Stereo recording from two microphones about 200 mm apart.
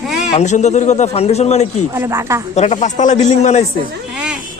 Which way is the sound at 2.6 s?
35° left (ahead or behind).